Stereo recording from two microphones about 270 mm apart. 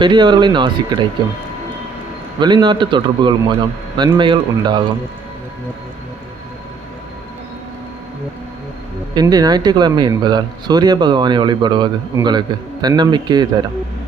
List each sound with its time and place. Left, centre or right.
0.0 s speech: centre
2.4 s speech: centre
9.1 s speech: centre